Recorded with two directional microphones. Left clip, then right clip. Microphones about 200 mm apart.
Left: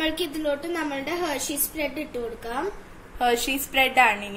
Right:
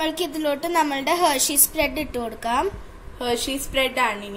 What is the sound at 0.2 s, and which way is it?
A woman's voice, 60° right (ahead or behind).